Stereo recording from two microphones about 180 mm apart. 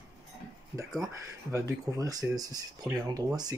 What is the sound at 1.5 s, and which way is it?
Speech, 20° right (ahead or behind).